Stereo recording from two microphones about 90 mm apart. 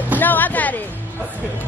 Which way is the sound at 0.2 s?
20° left (ahead or behind).